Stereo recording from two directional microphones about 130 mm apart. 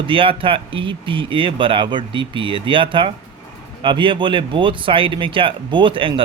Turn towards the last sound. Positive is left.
turn(degrees=-40)  # may be behind; listen again after turning